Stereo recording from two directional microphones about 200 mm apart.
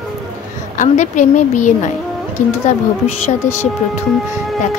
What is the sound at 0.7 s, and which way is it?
A woman's voice, 40° left (ahead or behind).